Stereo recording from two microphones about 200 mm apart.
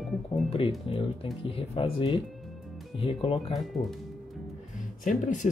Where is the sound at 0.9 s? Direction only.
25° left (ahead or behind).